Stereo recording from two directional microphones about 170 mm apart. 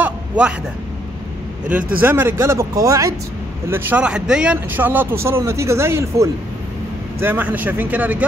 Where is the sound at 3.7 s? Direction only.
10° right (ahead or behind).